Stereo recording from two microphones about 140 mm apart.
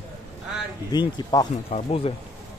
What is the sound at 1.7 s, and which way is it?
Speech, 45° left (ahead or behind).